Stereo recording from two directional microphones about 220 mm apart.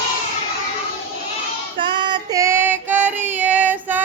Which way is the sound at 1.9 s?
20° right (ahead or behind).